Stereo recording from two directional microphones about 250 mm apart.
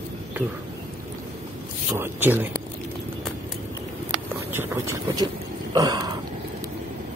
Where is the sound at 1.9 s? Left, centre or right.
Centre.